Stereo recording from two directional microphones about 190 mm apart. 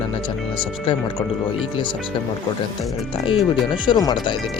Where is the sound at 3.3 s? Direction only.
25° left (ahead or behind).